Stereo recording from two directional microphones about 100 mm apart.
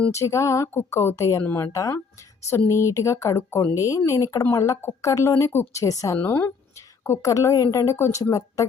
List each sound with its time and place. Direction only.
0.1 s a woman's voice: 30° left (ahead or behind)
6.1 s a woman's voice: 20° left (ahead or behind)
7.0 s a woman's voice: 30° left (ahead or behind)